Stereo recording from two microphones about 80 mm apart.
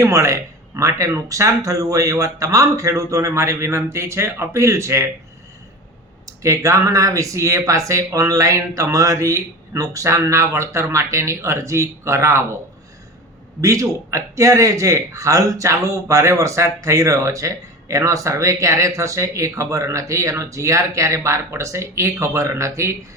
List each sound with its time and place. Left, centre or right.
0.0 s a man's voice: right
6.2 s a man's voice: right
13.6 s a man's voice: right